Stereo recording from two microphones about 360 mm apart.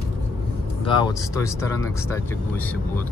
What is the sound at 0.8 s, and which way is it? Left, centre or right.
Speech, centre.